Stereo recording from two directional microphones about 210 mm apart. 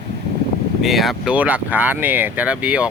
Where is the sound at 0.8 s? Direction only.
Centre (ahead or behind).